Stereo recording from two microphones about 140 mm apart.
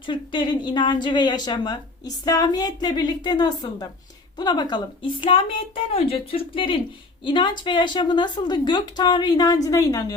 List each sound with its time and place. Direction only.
0.0 s a woman's voice: 35° left (ahead or behind)